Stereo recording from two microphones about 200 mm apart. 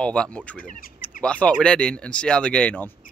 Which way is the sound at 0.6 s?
40° left (ahead or behind).